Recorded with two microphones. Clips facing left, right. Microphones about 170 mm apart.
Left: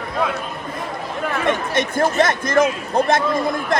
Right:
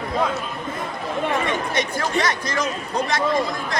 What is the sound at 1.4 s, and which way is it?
Speech, 50° left (ahead or behind).